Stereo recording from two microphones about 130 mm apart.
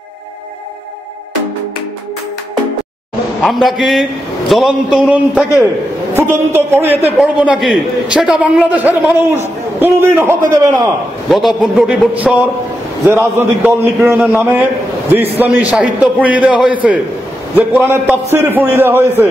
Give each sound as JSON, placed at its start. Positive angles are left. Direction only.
{"t": 3.4, "sound": "a man's voice", "side_deg": 0}
{"t": 6.1, "sound": "a man's voice", "side_deg": -20}
{"t": 7.2, "sound": "a man's voice", "side_deg": -5}
{"t": 11.2, "sound": "a man's voice", "side_deg": 0}